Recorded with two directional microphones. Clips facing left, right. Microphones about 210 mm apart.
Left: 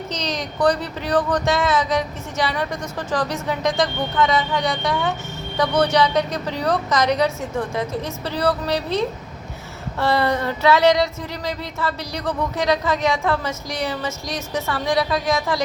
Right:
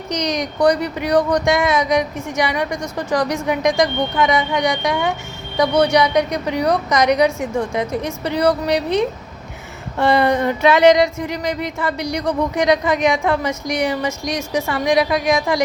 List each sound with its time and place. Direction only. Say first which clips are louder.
0.1 s speech: right 9 dB; 15° right (ahead or behind)